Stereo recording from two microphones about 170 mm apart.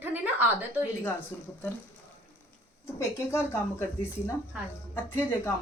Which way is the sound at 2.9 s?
15° left (ahead or behind).